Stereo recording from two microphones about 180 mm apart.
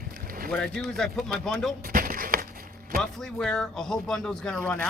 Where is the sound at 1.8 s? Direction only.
50° right (ahead or behind).